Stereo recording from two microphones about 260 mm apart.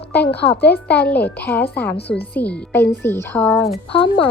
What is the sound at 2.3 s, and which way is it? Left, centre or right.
A child's voice, centre.